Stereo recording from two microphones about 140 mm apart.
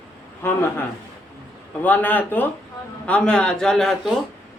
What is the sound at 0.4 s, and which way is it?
A woman's voice, 15° left (ahead or behind).